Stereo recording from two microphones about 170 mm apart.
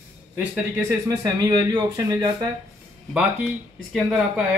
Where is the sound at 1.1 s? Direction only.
20° right (ahead or behind).